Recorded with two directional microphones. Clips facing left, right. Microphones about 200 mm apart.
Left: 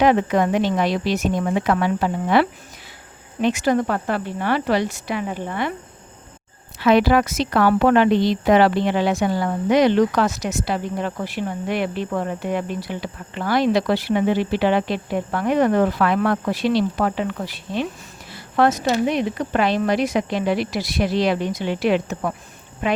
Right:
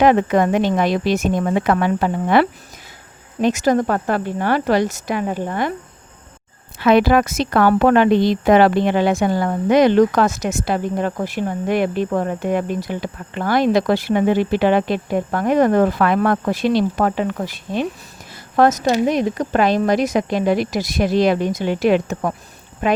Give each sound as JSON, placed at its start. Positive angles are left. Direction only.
{"t": 0.0, "sound": "speech", "side_deg": -50}
{"t": 3.4, "sound": "speech", "side_deg": -40}
{"t": 6.7, "sound": "speech", "side_deg": -50}